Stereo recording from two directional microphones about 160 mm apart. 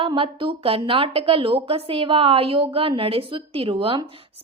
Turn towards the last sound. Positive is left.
turn(degrees=-35)  # may be behind; listen again after turning